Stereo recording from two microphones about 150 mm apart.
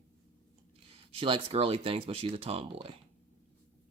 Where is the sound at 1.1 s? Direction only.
35° right (ahead or behind).